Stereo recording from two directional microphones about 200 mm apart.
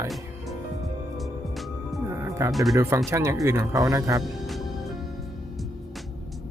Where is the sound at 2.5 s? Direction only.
Centre (ahead or behind).